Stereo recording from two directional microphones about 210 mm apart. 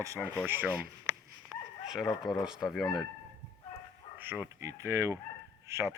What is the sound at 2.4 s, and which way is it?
Speech, 5° right (ahead or behind).